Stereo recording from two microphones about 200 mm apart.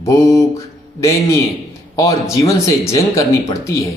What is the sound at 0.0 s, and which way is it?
Speech, 15° left (ahead or behind).